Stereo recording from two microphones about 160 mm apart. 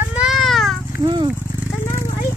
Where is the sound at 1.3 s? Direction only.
10° right (ahead or behind).